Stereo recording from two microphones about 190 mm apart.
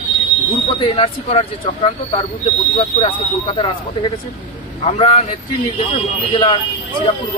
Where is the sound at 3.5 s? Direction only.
30° left (ahead or behind).